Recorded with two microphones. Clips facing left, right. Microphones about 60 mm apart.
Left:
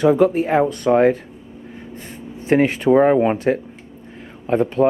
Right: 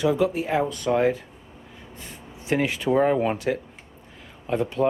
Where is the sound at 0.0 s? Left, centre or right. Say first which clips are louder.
Left 7 dB; left.